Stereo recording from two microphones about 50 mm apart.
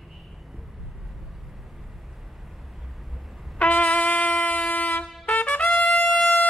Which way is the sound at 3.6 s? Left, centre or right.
Left.